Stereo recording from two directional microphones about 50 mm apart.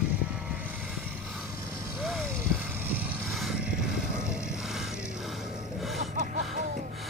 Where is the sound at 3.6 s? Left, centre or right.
Centre.